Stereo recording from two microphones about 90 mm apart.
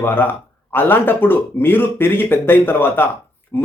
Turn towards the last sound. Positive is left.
turn(degrees=25)  # may be behind; listen again after turning